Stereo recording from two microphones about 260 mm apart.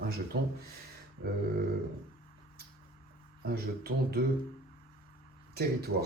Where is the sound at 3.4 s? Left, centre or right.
Right.